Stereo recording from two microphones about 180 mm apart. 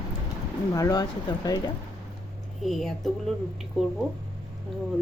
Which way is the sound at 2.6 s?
Centre (ahead or behind).